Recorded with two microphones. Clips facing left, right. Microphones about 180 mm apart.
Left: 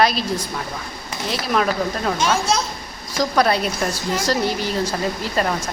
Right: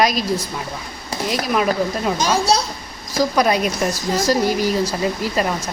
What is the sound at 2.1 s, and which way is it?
Speech, 40° right (ahead or behind).